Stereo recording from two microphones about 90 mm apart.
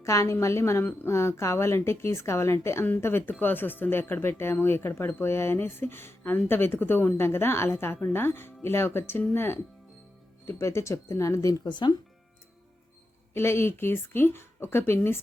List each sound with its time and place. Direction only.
0.0 s speech: 35° left (ahead or behind)
11.6 s speech: 55° left (ahead or behind)
13.3 s speech: 30° left (ahead or behind)